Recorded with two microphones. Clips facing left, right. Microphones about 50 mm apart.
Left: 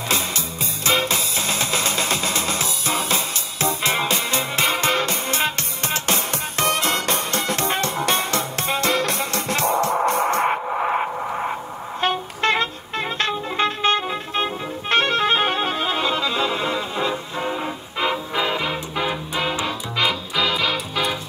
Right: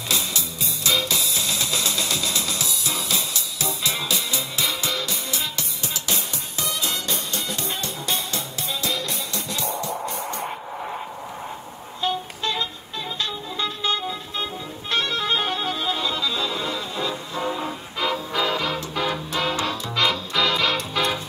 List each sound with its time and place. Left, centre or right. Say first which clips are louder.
0.8 s music: left 3 dB; left; by 21.2 s centre